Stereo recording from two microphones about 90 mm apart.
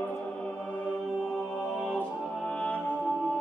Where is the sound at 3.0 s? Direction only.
5° left (ahead or behind).